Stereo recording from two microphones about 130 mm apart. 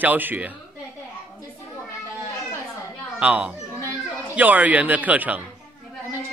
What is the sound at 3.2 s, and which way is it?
Speech, 10° right (ahead or behind).